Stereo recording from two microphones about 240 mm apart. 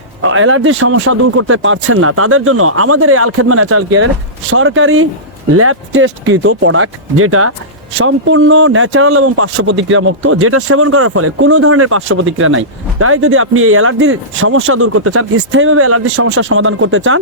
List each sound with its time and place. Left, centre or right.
0.2 s speech: right